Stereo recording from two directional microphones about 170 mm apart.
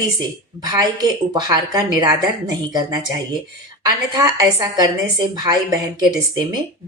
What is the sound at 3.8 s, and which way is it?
A woman's voice, 25° right (ahead or behind).